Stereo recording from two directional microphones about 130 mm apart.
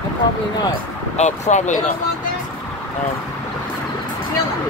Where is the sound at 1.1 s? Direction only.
60° left (ahead or behind).